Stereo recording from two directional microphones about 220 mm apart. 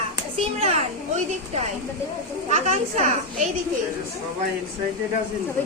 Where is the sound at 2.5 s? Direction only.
30° right (ahead or behind).